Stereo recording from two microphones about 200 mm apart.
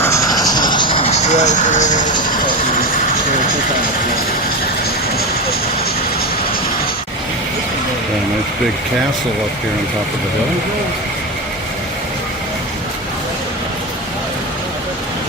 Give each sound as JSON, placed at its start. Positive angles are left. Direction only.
{"t": 0.0, "sound": "vehicle", "side_deg": 15}